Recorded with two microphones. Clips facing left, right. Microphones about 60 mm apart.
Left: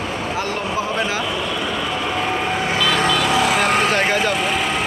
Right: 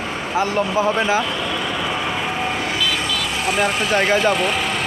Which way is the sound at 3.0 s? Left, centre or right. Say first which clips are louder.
Left 6 dB; left.